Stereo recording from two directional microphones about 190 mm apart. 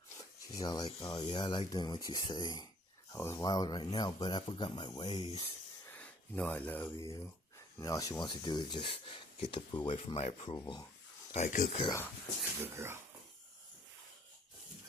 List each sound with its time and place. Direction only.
0.2 s speech: 20° left (ahead or behind)
5.9 s speech: 5° left (ahead or behind)
11.3 s speech: 40° left (ahead or behind)
12.7 s speech: 15° right (ahead or behind)